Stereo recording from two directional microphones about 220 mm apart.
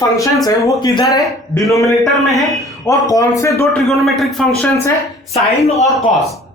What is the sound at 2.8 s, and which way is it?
Speech, 15° left (ahead or behind).